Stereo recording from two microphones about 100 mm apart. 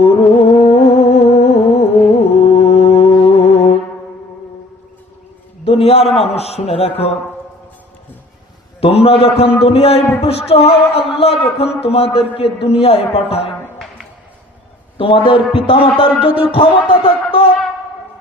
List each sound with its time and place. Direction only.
0.0 s music: 85° left
5.6 s a man's voice: 80° left
8.8 s a man's voice: 75° left (ahead or behind)
9.6 s music: 80° left
14.9 s a man's voice: 60° left (ahead or behind)